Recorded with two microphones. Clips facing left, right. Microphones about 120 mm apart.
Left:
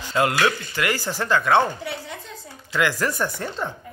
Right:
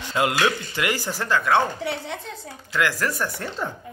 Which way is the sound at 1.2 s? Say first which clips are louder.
Left 2 dB; 5° right (ahead or behind).